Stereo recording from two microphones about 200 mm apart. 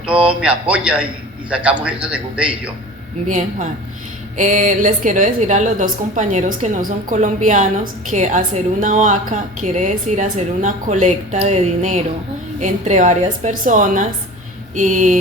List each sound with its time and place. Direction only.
0.3 s a man's voice: 5° right (ahead or behind)
3.2 s a woman's voice: 35° right (ahead or behind)